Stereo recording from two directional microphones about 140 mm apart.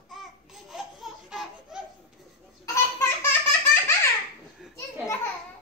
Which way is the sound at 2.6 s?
20° left (ahead or behind).